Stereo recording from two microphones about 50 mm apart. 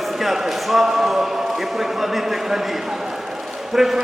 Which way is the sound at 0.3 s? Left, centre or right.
Centre.